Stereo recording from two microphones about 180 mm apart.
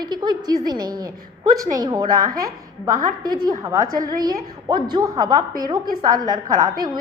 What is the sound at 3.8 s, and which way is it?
Speech, 50° right (ahead or behind).